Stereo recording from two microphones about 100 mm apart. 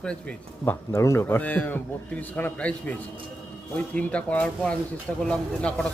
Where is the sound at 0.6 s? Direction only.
30° left (ahead or behind).